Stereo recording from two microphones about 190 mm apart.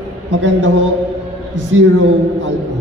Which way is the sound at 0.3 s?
75° right (ahead or behind).